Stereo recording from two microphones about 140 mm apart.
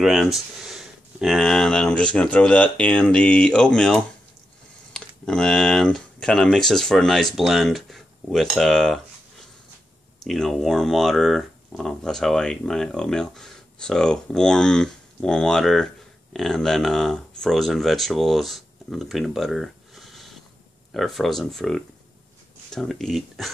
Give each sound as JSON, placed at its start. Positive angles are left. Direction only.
{"t": 0.0, "sound": "speech", "side_deg": 0}
{"t": 10.2, "sound": "speech", "side_deg": 0}